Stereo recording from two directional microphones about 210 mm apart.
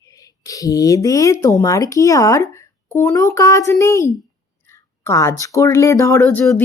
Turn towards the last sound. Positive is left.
turn(degrees=10)  # may be behind; listen again after turning